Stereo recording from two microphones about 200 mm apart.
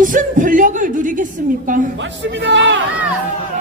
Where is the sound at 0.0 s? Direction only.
40° right (ahead or behind).